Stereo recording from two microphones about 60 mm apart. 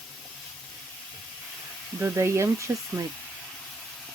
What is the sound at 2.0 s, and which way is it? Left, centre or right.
Speech, right.